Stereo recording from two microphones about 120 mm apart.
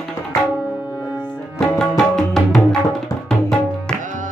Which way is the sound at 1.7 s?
5° left (ahead or behind).